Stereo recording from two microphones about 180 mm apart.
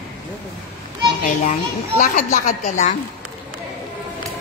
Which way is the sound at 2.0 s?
40° left (ahead or behind).